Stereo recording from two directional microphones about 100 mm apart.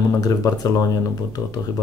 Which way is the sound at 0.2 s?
40° left (ahead or behind).